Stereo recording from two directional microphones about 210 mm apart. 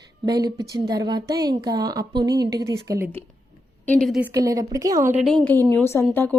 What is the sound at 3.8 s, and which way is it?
Speech, 5° left (ahead or behind).